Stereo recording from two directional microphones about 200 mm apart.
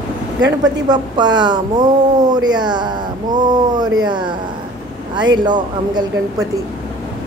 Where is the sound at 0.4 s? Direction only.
20° right (ahead or behind).